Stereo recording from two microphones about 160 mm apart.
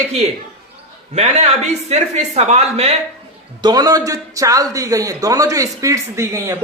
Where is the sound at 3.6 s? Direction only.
25° right (ahead or behind).